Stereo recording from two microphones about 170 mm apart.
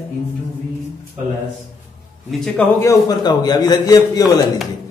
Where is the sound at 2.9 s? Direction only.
20° left (ahead or behind).